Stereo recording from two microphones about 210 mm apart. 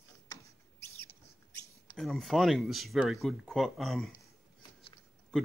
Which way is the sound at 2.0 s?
Centre (ahead or behind).